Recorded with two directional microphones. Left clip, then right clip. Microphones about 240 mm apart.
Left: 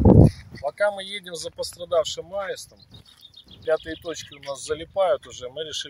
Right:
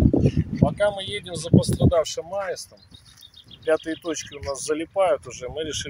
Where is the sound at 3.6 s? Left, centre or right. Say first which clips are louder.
Right 2 dB; centre.